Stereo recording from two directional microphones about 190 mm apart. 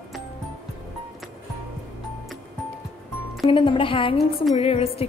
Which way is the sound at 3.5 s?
25° left (ahead or behind).